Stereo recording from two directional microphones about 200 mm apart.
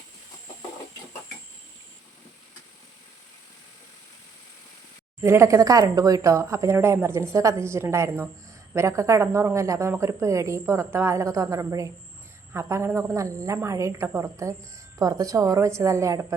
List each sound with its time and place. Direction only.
5.2 s a woman's voice: 15° right (ahead or behind)